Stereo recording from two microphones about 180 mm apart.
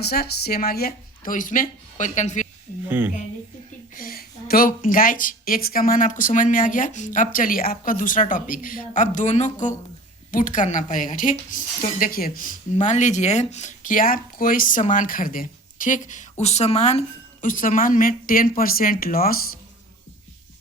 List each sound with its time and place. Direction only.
0.0 s speech: 60° left (ahead or behind); by 2.5 s 40° left (ahead or behind)
2.8 s a woman's voice: 10° right (ahead or behind)
3.9 s speech: 55° left (ahead or behind)